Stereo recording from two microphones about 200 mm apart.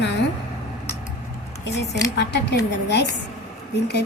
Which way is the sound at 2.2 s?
60° left (ahead or behind).